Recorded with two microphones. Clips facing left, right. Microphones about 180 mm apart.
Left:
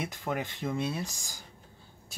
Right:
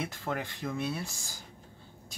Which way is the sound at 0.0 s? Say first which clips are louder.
Left 1 dB; 15° left (ahead or behind).